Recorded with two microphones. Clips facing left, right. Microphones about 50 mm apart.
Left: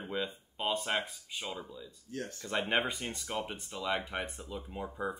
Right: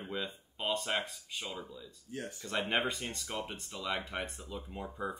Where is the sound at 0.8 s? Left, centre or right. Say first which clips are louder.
Left 1 dB; left.